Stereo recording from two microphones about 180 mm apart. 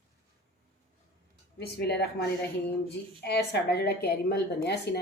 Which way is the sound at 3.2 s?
65° left (ahead or behind).